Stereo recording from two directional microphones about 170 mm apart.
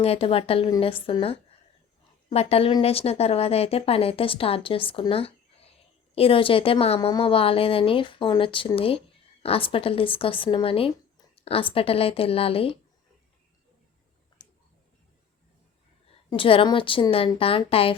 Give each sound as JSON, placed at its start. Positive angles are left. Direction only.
{"t": 0.0, "sound": "speech", "side_deg": 35}
{"t": 14.4, "sound": "tick", "side_deg": 25}
{"t": 16.3, "sound": "speech", "side_deg": 30}